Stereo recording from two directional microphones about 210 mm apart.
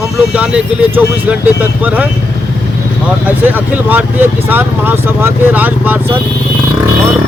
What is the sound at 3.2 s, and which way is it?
Speech, 10° right (ahead or behind).